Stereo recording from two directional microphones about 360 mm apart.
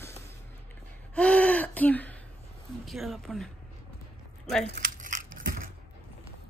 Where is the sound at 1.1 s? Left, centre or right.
Centre.